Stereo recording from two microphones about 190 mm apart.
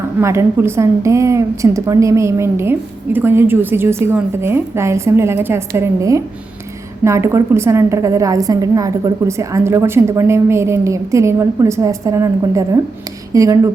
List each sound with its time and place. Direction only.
0.2 s a woman's voice: 15° right (ahead or behind)